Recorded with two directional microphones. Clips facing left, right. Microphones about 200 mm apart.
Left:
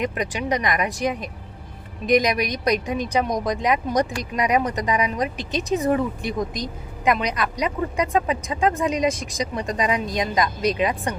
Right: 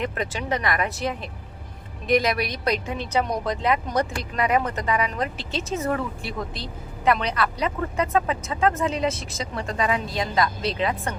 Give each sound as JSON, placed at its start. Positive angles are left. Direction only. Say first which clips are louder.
{"t": 0.0, "sound": "a woman's voice", "louder": "left 3 dB", "side_deg": 15}